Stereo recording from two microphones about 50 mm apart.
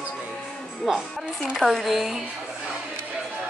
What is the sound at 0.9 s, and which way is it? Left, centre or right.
Speech, centre.